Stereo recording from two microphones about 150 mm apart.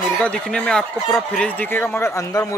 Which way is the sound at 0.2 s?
5° left (ahead or behind).